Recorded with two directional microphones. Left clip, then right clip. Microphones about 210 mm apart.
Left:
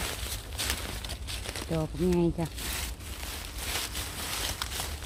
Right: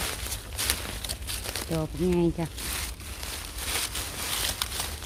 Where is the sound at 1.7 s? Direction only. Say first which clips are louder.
Right 1 dB; 5° right (ahead or behind).